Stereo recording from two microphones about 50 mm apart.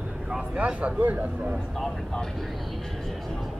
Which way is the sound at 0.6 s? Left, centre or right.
Right.